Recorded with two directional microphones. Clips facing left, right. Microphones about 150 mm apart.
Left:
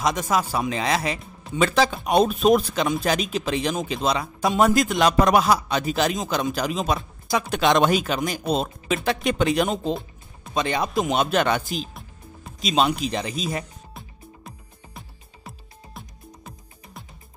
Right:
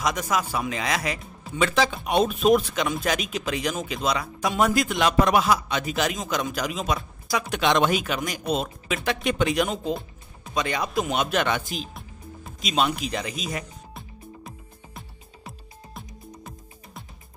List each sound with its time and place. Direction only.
0.0 s a man's voice: 25° left (ahead or behind)
15.0 s music: centre (ahead or behind)